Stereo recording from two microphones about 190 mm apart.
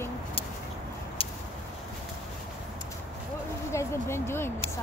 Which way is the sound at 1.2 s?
30° left (ahead or behind).